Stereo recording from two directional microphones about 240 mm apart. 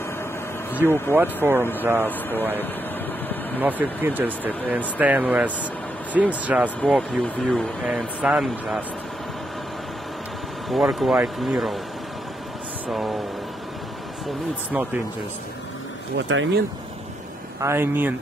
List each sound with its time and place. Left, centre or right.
0.8 s speech: centre
1.1 s speech: centre
1.6 s speech: centre
3.5 s speech: centre
10.7 s speech: centre
12.8 s speech: centre
16.2 s speech: right
17.6 s speech: centre